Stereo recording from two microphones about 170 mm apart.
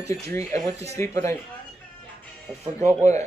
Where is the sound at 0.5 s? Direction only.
40° right (ahead or behind).